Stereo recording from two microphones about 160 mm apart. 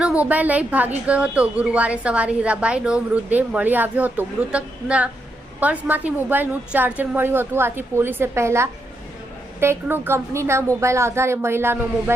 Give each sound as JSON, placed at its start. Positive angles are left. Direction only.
{"t": 0.0, "sound": "a woman's voice", "side_deg": -10}